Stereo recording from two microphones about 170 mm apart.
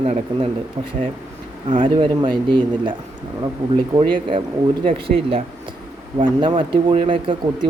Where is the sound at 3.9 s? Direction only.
30° right (ahead or behind).